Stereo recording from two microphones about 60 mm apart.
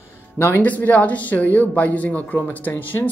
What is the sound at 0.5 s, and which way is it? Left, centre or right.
Speech, left.